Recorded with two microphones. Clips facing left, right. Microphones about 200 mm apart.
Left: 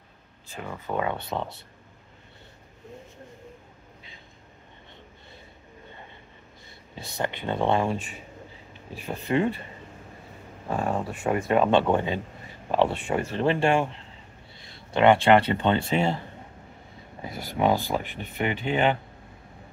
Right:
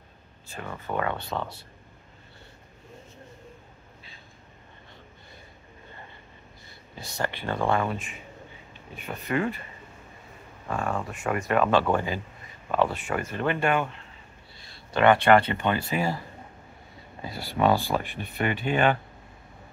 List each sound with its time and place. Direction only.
0.5 s speech: 10° left (ahead or behind)
7.0 s speech: 20° left (ahead or behind)
10.7 s speech: 25° left (ahead or behind)
14.9 s speech: 25° left (ahead or behind)
17.2 s speech: 20° left (ahead or behind)